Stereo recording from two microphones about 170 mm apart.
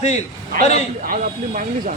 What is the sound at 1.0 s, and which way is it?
Speech, 55° right (ahead or behind).